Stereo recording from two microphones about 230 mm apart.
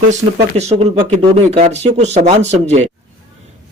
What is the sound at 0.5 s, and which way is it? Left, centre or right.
A man's voice, right.